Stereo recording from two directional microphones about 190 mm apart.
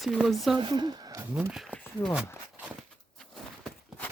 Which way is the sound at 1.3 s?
5° right (ahead or behind).